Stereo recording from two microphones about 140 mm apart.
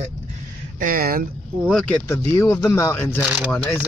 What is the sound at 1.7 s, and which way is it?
Speech, centre (ahead or behind).